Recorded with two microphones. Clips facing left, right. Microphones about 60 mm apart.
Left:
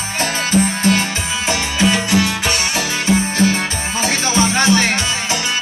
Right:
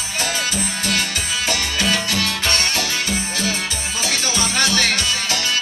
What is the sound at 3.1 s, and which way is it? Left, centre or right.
Music, left.